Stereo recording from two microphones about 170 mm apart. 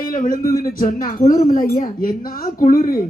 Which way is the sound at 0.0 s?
55° left (ahead or behind).